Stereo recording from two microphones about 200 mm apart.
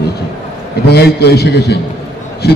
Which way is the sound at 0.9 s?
55° left (ahead or behind).